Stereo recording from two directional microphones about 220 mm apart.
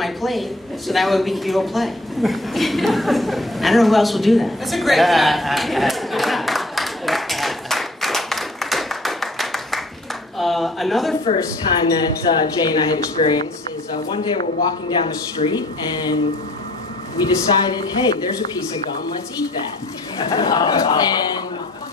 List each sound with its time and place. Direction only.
0.0 s a sound: centre (ahead or behind)
11.3 s a woman's voice: 15° left (ahead or behind)
17.2 s speech: 15° left (ahead or behind)
20.2 s speech: 15° left (ahead or behind)